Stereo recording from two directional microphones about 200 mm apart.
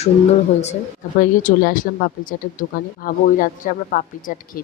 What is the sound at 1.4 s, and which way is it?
Speech, 45° left (ahead or behind).